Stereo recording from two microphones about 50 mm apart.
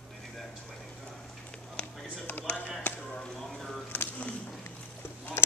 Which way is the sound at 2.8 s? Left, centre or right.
Left.